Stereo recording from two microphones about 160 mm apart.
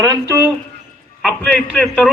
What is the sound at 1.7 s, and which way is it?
Speech, centre (ahead or behind).